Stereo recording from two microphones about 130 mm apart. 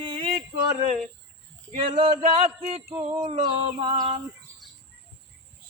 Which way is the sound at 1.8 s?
40° right (ahead or behind).